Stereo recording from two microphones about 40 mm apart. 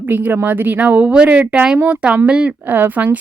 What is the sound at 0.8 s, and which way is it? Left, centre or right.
Speech, right.